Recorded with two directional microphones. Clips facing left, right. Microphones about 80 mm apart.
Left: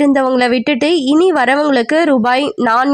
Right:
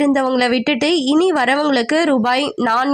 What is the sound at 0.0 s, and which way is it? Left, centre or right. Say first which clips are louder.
A woman's voice: left 4 dB; left.